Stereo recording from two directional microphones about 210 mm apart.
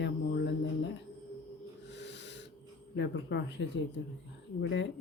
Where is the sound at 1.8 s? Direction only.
55° left (ahead or behind).